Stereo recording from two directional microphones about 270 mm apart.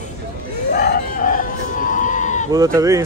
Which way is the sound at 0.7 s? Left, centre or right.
Left.